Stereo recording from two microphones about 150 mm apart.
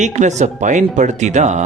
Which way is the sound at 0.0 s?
50° right (ahead or behind).